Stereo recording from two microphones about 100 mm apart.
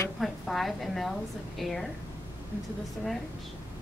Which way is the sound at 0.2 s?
Centre (ahead or behind).